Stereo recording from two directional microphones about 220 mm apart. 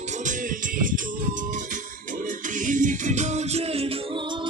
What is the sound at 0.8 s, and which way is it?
Music, 35° right (ahead or behind).